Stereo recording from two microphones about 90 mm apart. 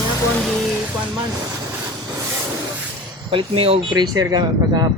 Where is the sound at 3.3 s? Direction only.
85° right.